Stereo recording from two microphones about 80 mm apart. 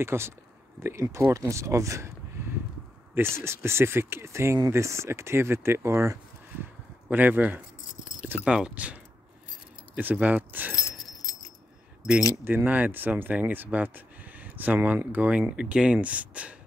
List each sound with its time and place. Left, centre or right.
0.0 s speech: right
3.2 s speech: right
6.6 s a sound: right
8.5 s speech: centre
10.8 s keys jangling: left
12.4 s speech: right